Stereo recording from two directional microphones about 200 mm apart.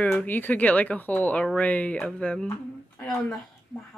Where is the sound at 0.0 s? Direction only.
10° left (ahead or behind).